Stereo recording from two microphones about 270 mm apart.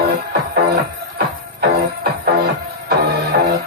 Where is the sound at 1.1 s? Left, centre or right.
Right.